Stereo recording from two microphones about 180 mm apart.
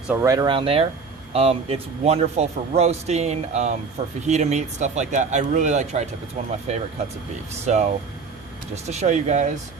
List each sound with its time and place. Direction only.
0.1 s speech: 15° right (ahead or behind); by 9.5 s 40° right (ahead or behind)